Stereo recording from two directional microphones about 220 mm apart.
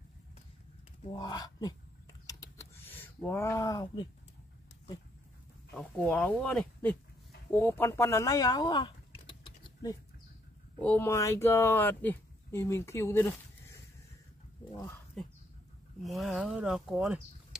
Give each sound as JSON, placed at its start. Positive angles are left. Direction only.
{"t": 1.1, "sound": "speech", "side_deg": 20}
{"t": 2.2, "sound": "a sound", "side_deg": 15}
{"t": 5.8, "sound": "speech", "side_deg": 5}
{"t": 14.7, "sound": "speech", "side_deg": 15}
{"t": 16.0, "sound": "speech", "side_deg": 0}